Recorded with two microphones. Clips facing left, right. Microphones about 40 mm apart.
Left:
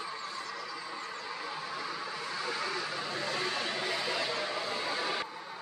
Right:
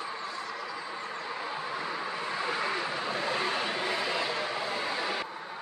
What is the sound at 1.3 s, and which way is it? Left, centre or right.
Vehicle, right.